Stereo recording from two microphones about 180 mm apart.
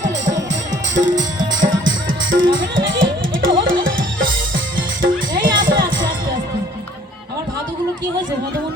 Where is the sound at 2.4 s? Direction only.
90° right.